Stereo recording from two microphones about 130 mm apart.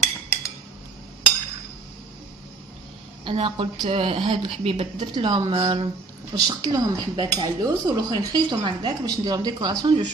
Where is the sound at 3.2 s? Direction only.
45° right (ahead or behind).